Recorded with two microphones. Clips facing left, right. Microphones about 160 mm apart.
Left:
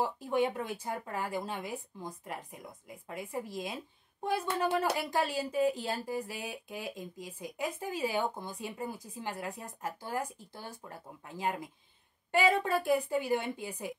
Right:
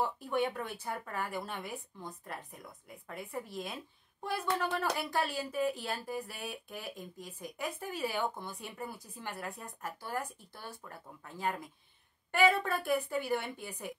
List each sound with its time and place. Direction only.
0.0 s speech: 15° left (ahead or behind)